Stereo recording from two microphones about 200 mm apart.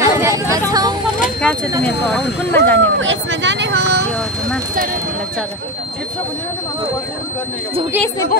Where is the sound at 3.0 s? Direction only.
70° right (ahead or behind).